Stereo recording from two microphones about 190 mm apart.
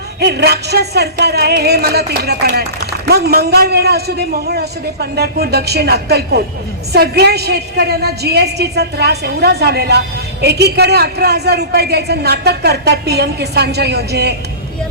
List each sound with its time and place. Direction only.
0.2 s a woman's voice: 60° right (ahead or behind)